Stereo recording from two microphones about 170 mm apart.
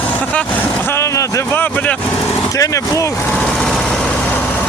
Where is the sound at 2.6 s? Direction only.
20° left (ahead or behind).